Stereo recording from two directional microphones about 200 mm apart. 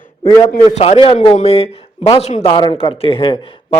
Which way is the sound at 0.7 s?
30° left (ahead or behind).